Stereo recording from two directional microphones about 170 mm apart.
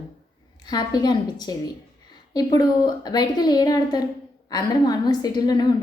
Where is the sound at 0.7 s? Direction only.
25° left (ahead or behind).